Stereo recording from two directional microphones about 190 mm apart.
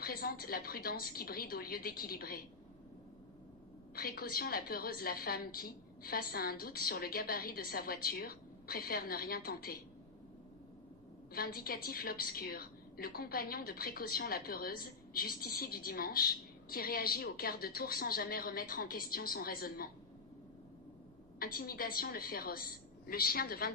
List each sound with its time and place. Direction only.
0.0 s a woman's voice: 50° left (ahead or behind)
3.9 s a woman's voice: 50° left (ahead or behind)
11.3 s a woman's voice: 50° left (ahead or behind)
21.4 s a woman's voice: 50° left (ahead or behind)